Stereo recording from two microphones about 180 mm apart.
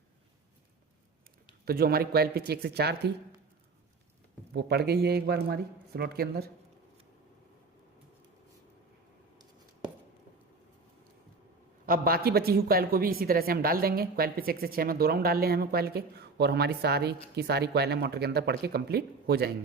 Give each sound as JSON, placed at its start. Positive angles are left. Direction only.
{"t": 1.6, "sound": "a woman's voice", "side_deg": -55}
{"t": 4.5, "sound": "a woman's voice", "side_deg": -65}
{"t": 11.9, "sound": "a woman's voice", "side_deg": -55}